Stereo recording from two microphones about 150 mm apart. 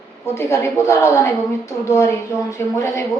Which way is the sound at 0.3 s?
20° left (ahead or behind).